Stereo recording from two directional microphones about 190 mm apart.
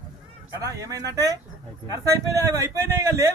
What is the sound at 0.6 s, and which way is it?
A man's voice, 15° right (ahead or behind).